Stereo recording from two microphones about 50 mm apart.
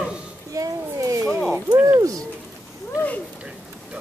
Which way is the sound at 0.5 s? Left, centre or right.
Right.